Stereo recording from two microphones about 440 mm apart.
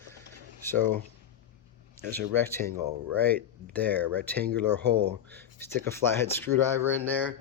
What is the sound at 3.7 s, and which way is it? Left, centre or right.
Speech, centre.